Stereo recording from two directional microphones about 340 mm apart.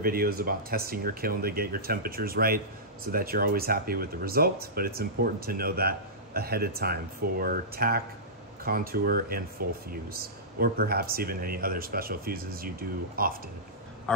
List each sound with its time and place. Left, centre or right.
0.0 s speech: right
14.1 s a man's voice: centre